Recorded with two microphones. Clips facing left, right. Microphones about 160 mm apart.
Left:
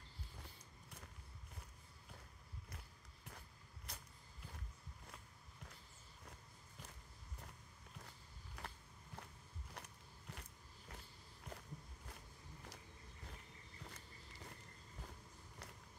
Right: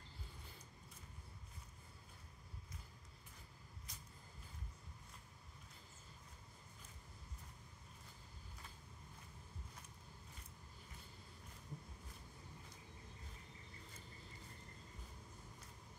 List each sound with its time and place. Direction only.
3.9 s vehicle: 65° left (ahead or behind)
8.5 s a sound: 70° left (ahead or behind)
9.8 s biting: 70° left (ahead or behind)